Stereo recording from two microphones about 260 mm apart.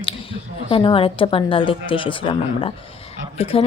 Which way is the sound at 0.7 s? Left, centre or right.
Centre.